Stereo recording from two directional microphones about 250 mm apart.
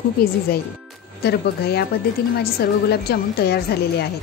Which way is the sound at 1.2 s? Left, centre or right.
Left.